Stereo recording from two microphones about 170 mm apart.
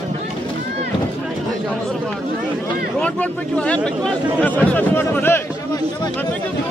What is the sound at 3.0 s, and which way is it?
Speech, 5° left (ahead or behind).